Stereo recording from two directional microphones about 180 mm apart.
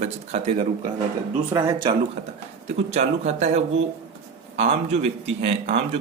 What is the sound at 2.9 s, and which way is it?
Speech, 40° right (ahead or behind).